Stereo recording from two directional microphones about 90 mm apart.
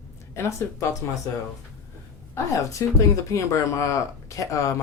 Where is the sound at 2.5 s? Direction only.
40° left (ahead or behind).